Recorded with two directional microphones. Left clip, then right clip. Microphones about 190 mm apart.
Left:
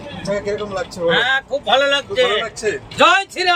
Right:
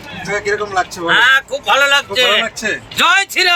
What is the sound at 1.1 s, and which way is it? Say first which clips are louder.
Speech: right 7 dB; centre (ahead or behind).